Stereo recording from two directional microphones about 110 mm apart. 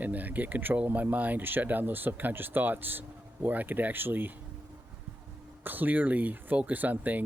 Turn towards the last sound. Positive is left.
turn(degrees=-15)  # may be behind; listen again after turning